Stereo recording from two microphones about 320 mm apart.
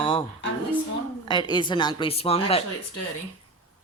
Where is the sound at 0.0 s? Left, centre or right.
Centre.